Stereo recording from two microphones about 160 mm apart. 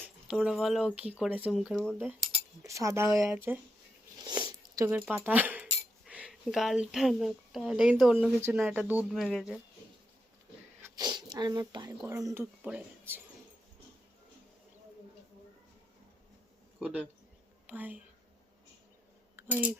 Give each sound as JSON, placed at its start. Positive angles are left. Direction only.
{"t": 0.0, "sound": "speech", "side_deg": -5}
{"t": 2.6, "sound": "speech", "side_deg": -20}
{"t": 4.2, "sound": "a sound", "side_deg": -25}
{"t": 4.9, "sound": "speech", "side_deg": -10}
{"t": 10.8, "sound": "a sound", "side_deg": -25}
{"t": 12.0, "sound": "speech", "side_deg": -15}
{"t": 16.8, "sound": "a woman's voice", "side_deg": -10}
{"t": 19.4, "sound": "speech", "side_deg": -10}